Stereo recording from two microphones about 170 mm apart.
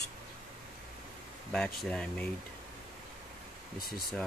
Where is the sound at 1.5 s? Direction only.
5° left (ahead or behind).